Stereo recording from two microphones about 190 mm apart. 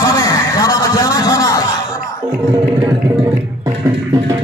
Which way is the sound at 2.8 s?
20° right (ahead or behind).